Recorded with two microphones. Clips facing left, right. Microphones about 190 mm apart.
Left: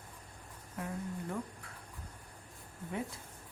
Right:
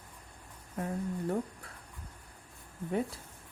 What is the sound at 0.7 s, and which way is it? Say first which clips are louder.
Speech: right 5 dB; 35° right (ahead or behind).